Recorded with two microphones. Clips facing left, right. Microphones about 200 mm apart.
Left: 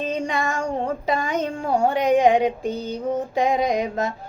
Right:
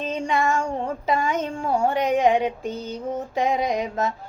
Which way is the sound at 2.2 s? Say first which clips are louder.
Left 1 dB; 35° left (ahead or behind).